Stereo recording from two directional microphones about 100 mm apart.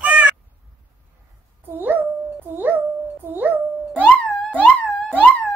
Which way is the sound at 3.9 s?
15° left (ahead or behind).